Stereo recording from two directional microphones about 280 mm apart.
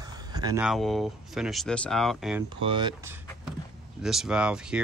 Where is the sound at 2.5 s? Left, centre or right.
Centre.